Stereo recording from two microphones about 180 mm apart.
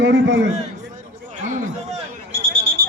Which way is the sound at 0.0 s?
85° right.